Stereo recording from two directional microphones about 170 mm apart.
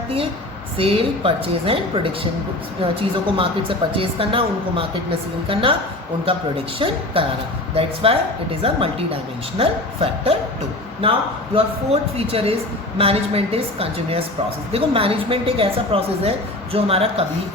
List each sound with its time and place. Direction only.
0.8 s a woman's voice: 35° right (ahead or behind)
2.8 s a woman's voice: 30° right (ahead or behind)
6.7 s a woman's voice: 30° right (ahead or behind)
9.6 s a woman's voice: 35° right (ahead or behind)
11.5 s a woman's voice: 35° right (ahead or behind)